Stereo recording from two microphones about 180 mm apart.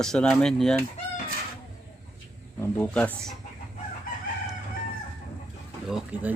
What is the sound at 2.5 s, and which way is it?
Speech, 10° left (ahead or behind).